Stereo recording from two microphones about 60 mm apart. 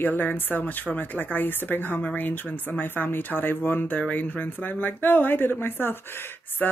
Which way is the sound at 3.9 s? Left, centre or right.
Left.